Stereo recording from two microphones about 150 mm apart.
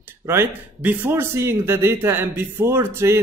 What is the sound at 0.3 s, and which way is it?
Speech, 15° right (ahead or behind).